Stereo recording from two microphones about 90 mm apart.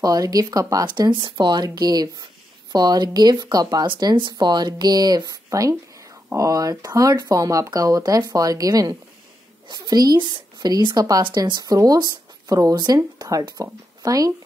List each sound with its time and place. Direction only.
0.0 s speech: 45° right (ahead or behind)
0.8 s speech: 55° right (ahead or behind)
3.8 s speech: 60° right (ahead or behind); by 14.3 s 40° right (ahead or behind)